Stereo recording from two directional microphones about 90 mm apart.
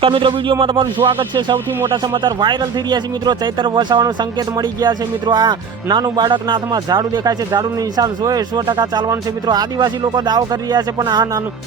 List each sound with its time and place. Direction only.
0.0 s speech: 70° right (ahead or behind); by 11.3 s 50° right (ahead or behind)